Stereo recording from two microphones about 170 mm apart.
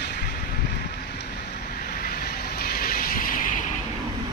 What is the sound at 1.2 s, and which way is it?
Vehicle, 65° left (ahead or behind).